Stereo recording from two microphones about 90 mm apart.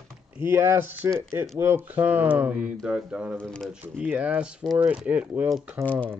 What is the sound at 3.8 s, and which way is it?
A man's voice, 15° right (ahead or behind).